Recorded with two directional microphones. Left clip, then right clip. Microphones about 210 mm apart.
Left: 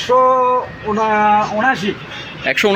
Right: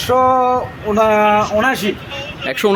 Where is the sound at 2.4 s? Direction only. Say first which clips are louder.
Left 3 dB; 15° right (ahead or behind).